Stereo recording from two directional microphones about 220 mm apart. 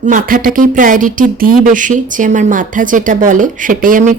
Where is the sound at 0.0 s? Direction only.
35° right (ahead or behind).